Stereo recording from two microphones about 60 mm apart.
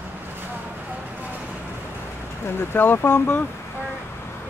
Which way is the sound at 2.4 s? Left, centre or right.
Left.